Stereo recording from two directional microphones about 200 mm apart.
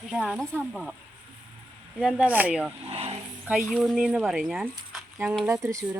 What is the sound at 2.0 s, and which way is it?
Speech, 5° right (ahead or behind).